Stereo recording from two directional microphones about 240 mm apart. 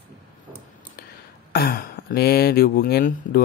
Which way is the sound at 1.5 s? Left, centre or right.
Left.